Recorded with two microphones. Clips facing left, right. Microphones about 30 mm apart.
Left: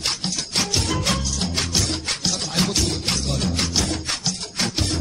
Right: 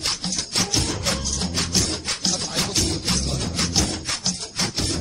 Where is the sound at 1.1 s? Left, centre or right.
Left.